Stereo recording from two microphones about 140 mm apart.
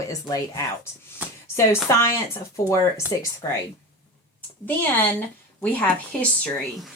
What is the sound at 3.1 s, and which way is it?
Speech, 25° left (ahead or behind).